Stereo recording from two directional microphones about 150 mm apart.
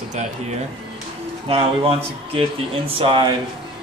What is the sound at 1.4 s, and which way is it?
Speech, 40° right (ahead or behind).